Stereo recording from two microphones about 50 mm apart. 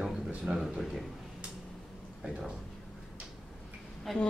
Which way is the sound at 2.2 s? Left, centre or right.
Centre.